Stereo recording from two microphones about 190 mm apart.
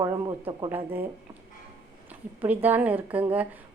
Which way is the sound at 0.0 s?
20° right (ahead or behind).